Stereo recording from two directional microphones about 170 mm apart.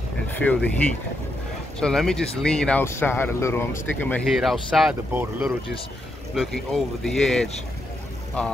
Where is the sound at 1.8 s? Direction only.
5° left (ahead or behind).